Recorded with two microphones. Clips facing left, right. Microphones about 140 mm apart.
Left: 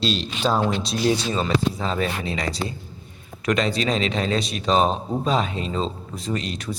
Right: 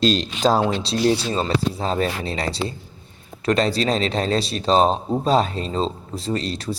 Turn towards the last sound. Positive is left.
turn(degrees=-35)  # may be behind; listen again after turning